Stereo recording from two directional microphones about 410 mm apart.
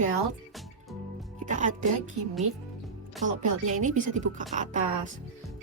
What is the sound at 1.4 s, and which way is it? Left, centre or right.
Speech, centre.